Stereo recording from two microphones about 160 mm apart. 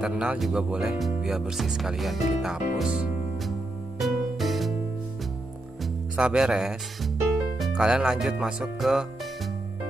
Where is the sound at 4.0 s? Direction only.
Centre (ahead or behind).